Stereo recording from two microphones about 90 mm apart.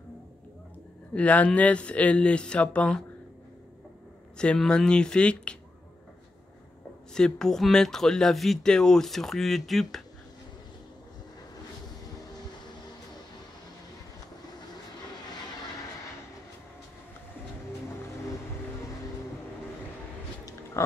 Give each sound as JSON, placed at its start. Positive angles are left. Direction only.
{"t": 1.1, "sound": "speech", "side_deg": 15}
{"t": 4.4, "sound": "speech", "side_deg": 10}
{"t": 7.2, "sound": "speech", "side_deg": 5}
{"t": 20.8, "sound": "pig", "side_deg": 30}